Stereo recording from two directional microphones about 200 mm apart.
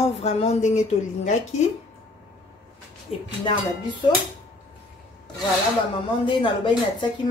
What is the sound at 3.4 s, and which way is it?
Speech, 20° left (ahead or behind).